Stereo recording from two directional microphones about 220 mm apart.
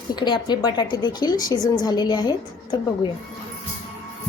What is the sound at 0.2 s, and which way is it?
A woman's voice, 20° left (ahead or behind).